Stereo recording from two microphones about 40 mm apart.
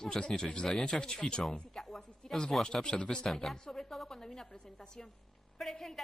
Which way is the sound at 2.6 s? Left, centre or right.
Centre.